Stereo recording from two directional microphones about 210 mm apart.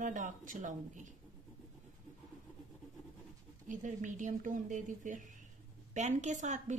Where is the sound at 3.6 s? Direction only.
35° right (ahead or behind).